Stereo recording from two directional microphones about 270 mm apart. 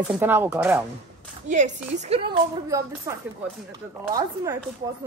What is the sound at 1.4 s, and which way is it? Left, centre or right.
Speech, right.